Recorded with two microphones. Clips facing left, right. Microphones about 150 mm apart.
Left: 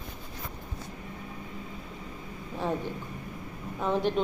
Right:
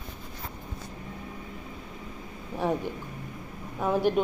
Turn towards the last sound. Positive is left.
turn(degrees=-10)  # may be behind; listen again after turning